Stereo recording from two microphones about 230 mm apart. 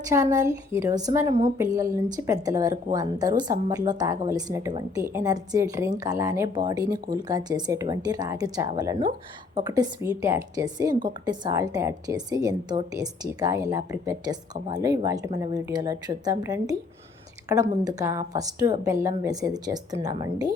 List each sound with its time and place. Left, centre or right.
0.1 s a woman's voice: centre